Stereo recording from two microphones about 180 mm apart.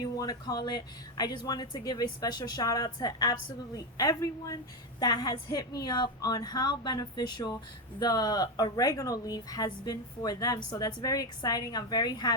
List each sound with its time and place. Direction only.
0.2 s speech: 20° left (ahead or behind)